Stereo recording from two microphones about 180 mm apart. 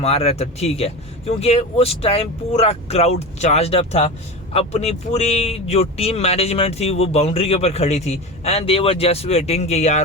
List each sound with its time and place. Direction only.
0.0 s speech: 35° left (ahead or behind)